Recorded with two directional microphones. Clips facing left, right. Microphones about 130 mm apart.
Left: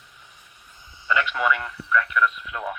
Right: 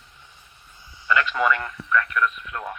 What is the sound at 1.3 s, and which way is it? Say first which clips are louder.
Speech: right 1 dB; 5° left (ahead or behind).